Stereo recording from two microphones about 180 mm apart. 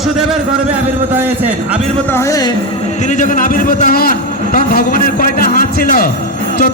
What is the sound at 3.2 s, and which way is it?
A man's voice, 50° left (ahead or behind).